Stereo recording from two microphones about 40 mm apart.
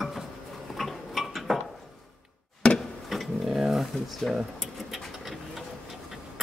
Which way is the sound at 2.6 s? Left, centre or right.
Left.